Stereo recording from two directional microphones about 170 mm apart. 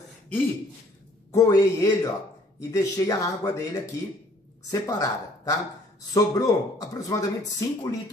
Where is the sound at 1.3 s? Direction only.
20° left (ahead or behind).